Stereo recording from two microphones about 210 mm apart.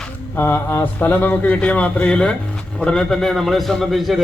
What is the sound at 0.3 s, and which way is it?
A man's voice, 10° left (ahead or behind).